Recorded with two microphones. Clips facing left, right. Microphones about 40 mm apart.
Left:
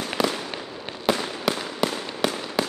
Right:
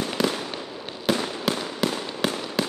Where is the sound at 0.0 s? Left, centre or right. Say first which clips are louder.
Even; centre.